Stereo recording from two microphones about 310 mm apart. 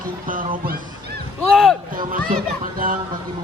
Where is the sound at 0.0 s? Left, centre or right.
Right.